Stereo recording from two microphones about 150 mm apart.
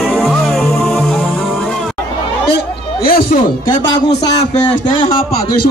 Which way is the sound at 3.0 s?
75° left (ahead or behind).